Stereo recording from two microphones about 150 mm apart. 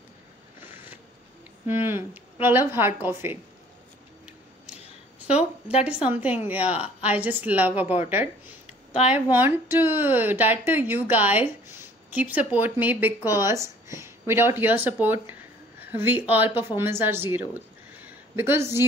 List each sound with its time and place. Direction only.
1.7 s speech: 15° right (ahead or behind)
5.3 s a sound: 45° left (ahead or behind)
6.0 s speech: 10° right (ahead or behind)
9.0 s speech: 10° right (ahead or behind)